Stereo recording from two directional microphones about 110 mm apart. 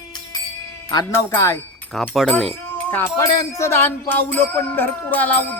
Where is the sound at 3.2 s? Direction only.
30° left (ahead or behind).